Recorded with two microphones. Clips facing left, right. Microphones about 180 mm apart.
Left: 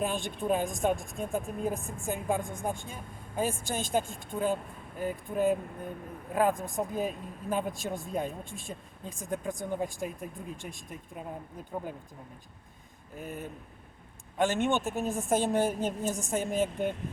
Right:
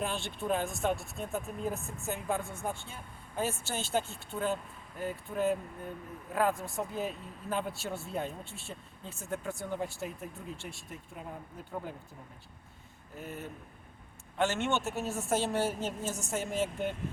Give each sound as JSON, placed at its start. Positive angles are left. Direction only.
{"t": 0.0, "sound": "speech", "side_deg": 15}
{"t": 13.1, "sound": "speech", "side_deg": 15}